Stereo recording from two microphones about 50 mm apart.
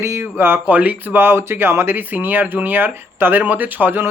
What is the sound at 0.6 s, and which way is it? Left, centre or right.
Speech, right.